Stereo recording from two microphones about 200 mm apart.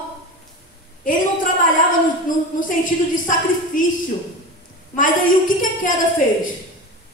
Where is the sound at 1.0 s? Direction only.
40° left (ahead or behind).